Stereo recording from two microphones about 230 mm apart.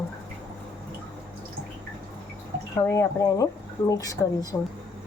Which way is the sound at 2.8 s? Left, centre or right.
Centre.